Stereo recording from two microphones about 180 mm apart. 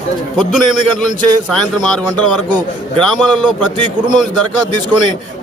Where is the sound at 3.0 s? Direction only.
5° left (ahead or behind).